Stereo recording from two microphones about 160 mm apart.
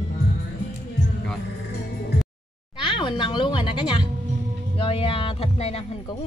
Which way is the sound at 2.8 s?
30° left (ahead or behind).